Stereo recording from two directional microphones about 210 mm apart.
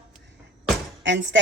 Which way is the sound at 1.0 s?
60° right (ahead or behind).